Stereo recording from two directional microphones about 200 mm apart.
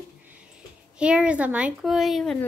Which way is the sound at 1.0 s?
5° right (ahead or behind).